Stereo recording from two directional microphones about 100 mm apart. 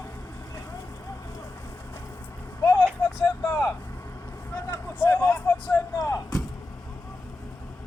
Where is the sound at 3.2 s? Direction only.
45° left (ahead or behind).